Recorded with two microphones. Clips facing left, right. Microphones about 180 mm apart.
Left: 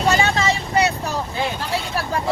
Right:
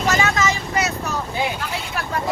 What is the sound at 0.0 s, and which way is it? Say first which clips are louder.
Vehicle: left 1 dB; 30° left (ahead or behind).